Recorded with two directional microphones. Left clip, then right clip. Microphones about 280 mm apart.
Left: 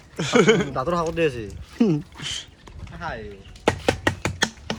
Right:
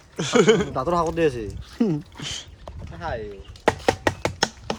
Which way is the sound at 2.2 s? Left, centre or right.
Right.